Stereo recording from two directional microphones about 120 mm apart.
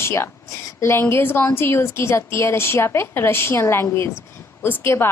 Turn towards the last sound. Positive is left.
turn(degrees=20)  # may be behind; listen again after turning